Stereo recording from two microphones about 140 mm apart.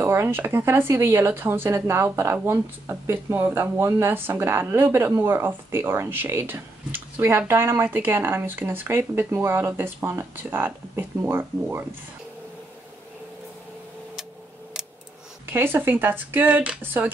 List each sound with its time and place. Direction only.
0.0 s speech: 15° right (ahead or behind)
15.4 s speech: 15° right (ahead or behind)